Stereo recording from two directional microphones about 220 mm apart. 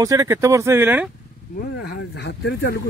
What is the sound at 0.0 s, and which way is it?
Speech, 15° right (ahead or behind).